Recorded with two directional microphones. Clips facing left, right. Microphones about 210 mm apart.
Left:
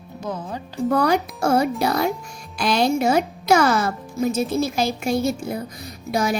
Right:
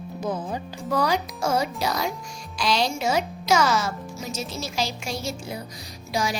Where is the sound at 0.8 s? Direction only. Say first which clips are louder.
Left 5 dB; 60° left (ahead or behind).